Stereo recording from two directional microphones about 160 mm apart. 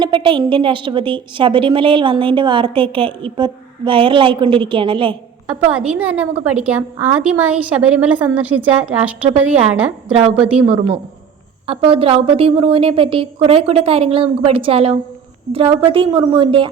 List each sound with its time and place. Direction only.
0.0 s a woman's voice: 30° right (ahead or behind)
5.5 s a woman's voice: 5° right (ahead or behind)
10.1 s a woman's voice: 40° right (ahead or behind)
10.3 s a woman's voice: 10° right (ahead or behind)
11.6 s a woman's voice: 35° right (ahead or behind)